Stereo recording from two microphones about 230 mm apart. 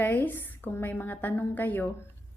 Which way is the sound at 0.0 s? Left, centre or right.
Centre.